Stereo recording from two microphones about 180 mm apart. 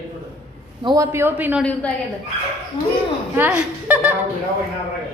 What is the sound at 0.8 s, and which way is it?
Speech, 20° right (ahead or behind).